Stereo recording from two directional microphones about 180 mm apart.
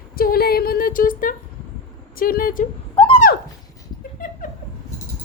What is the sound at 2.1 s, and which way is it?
Speech, 55° left (ahead or behind).